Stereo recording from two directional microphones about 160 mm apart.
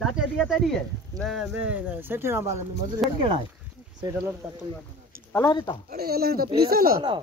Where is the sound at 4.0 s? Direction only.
20° right (ahead or behind).